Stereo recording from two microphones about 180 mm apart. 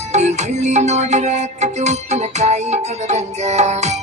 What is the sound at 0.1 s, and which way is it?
Music, 40° right (ahead or behind).